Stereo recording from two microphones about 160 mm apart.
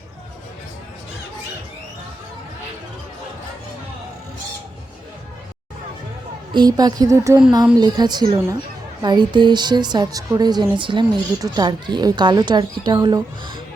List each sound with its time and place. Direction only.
6.5 s speech: 25° right (ahead or behind)